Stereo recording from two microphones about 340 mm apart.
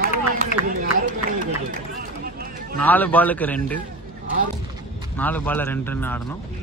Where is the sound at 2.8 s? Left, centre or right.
Centre.